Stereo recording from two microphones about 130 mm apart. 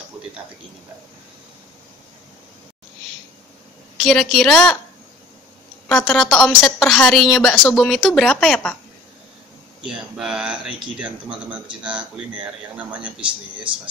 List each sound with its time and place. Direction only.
4.0 s a woman's voice: 5° left (ahead or behind)
5.9 s a woman's voice: 5° left (ahead or behind)
9.8 s speech: 5° right (ahead or behind)
13.2 s speech: 40° right (ahead or behind)